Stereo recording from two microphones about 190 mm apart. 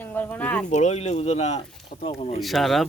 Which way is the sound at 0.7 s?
40° left (ahead or behind).